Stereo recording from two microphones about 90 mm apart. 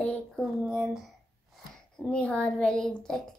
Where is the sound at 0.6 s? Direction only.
5° right (ahead or behind).